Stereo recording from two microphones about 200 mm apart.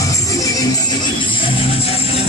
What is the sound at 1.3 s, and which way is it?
Music, 25° left (ahead or behind).